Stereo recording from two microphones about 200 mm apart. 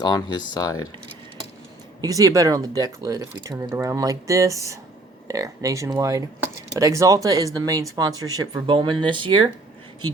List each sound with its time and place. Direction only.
0.0 s speech: 20° left (ahead or behind)
2.0 s speech: 15° right (ahead or behind)